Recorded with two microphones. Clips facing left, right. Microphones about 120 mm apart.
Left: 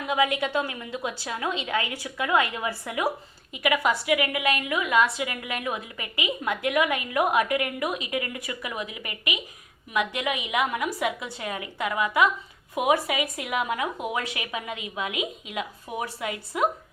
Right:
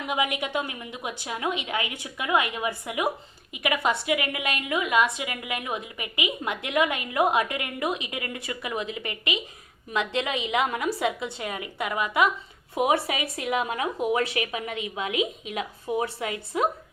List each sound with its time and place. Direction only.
0.0 s a woman's voice: 20° right (ahead or behind)